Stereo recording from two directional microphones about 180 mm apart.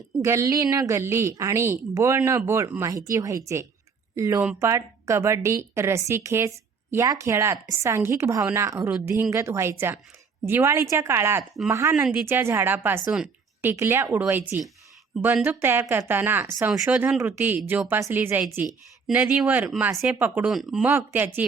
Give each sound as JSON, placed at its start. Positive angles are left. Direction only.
{"t": 0.2, "sound": "a woman's voice", "side_deg": -15}